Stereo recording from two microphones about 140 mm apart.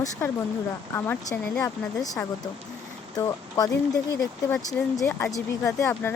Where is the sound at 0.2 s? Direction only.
20° left (ahead or behind).